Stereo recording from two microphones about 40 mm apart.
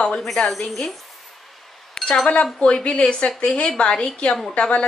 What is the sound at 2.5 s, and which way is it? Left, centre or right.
Speech, left.